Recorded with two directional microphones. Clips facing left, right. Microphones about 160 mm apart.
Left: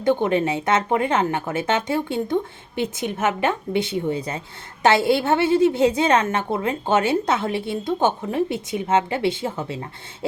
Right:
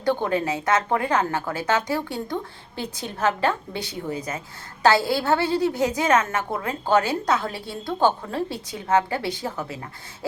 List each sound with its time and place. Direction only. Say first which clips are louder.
0.0 s a woman's voice: left 4 dB; 20° left (ahead or behind)